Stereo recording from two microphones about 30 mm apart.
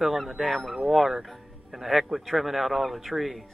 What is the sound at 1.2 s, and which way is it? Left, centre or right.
Music, centre.